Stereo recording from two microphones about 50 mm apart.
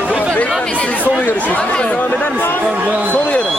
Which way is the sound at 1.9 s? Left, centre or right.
Left.